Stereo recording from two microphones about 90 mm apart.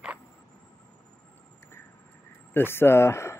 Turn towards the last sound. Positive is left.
turn(degrees=30)  # may be behind; listen again after turning